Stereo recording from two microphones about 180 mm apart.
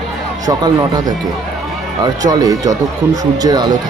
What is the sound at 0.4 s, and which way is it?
Speech, 20° right (ahead or behind).